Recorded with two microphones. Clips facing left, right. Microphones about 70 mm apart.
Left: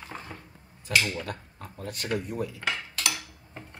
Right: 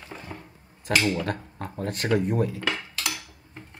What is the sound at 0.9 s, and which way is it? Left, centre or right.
Speech, right.